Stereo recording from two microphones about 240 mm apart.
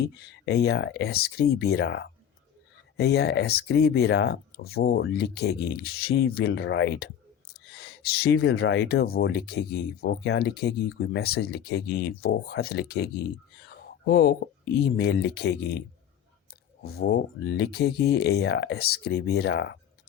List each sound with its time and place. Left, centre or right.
0.2 s speech: left
16.8 s speech: left